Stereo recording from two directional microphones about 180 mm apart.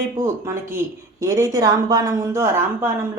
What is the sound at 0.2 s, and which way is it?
Speech, 15° right (ahead or behind).